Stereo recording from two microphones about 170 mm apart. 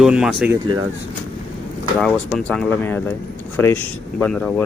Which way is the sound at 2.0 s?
5° left (ahead or behind).